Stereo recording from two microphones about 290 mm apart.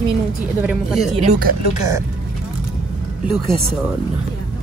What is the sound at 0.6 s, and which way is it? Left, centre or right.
Speech, centre.